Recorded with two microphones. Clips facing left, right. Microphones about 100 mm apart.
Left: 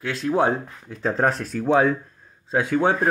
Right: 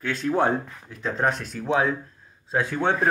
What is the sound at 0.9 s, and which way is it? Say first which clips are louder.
Speech: left 3 dB; 35° left (ahead or behind).